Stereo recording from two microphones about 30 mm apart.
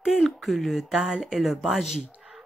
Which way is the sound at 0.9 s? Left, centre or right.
Centre.